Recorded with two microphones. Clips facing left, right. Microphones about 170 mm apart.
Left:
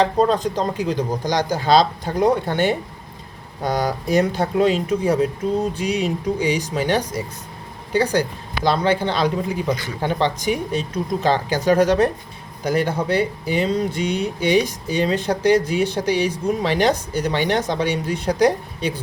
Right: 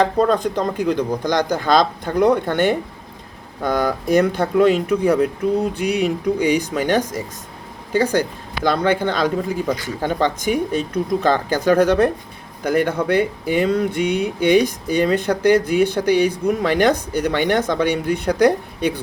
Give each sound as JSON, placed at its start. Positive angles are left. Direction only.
{"t": 0.0, "sound": "speech", "side_deg": -55}
{"t": 8.6, "sound": "speech", "side_deg": -55}